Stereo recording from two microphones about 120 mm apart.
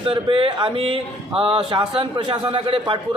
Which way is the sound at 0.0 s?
45° right (ahead or behind).